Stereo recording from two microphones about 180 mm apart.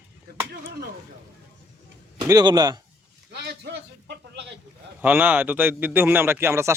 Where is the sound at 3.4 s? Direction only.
70° right (ahead or behind).